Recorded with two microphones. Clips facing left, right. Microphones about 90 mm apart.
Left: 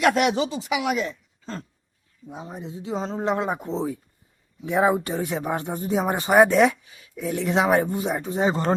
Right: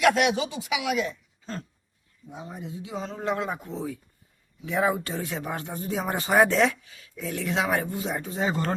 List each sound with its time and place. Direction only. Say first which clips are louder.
0.0 s speech: left 2 dB; 40° left (ahead or behind); by 8.7 s 20° left (ahead or behind)